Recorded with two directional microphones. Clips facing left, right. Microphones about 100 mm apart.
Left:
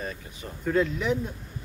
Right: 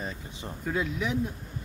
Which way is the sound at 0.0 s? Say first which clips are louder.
Left 1 dB; 20° right (ahead or behind).